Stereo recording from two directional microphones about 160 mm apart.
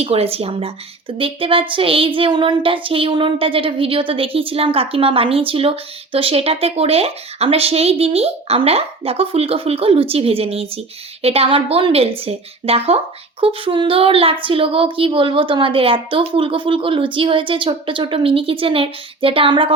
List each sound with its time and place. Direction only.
0.0 s child singing: 40° right (ahead or behind)